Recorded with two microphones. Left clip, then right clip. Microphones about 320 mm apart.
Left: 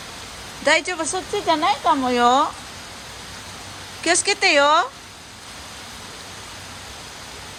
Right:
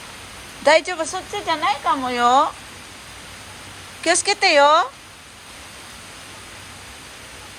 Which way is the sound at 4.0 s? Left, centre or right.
Centre.